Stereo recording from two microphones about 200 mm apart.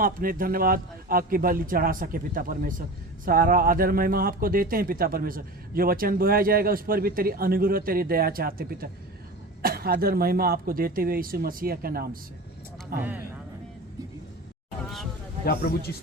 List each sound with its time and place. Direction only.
0.0 s speech: 45° right (ahead or behind)
15.4 s a man's voice: 50° left (ahead or behind)